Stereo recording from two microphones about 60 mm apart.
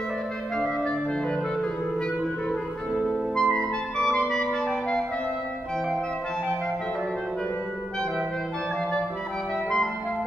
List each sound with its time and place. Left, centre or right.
2.9 s clarinet: centre